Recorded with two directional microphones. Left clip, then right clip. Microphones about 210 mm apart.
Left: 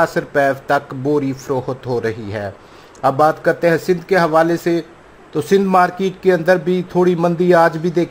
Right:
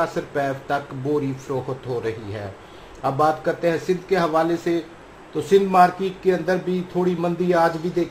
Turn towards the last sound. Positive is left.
turn(degrees=30)  # may be behind; listen again after turning